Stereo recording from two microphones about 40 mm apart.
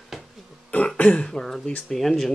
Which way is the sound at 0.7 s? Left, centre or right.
Left.